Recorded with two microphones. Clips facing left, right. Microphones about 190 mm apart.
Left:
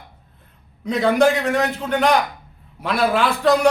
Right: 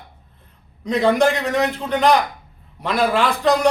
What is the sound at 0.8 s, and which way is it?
A man's voice, 5° left (ahead or behind).